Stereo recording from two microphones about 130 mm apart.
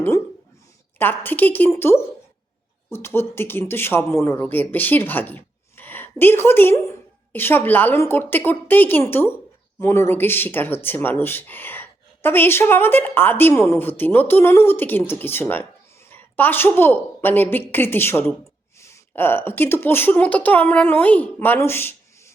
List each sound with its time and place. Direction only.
0.9 s speech: 15° left (ahead or behind)